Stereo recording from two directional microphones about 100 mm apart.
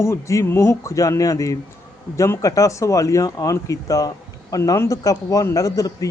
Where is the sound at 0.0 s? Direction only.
30° left (ahead or behind).